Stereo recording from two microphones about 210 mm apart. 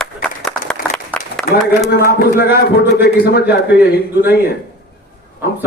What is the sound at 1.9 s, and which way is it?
A man's voice, 45° left (ahead or behind).